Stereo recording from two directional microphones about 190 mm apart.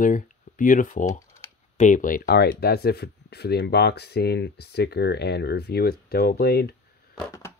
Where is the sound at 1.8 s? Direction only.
45° left (ahead or behind).